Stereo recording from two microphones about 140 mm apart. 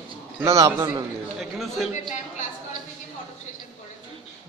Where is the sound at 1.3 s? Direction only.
Centre (ahead or behind).